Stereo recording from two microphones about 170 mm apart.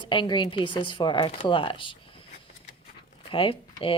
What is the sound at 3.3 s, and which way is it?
Speech, 30° left (ahead or behind).